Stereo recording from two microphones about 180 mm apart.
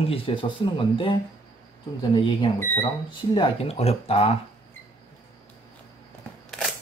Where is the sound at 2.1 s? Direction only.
25° left (ahead or behind).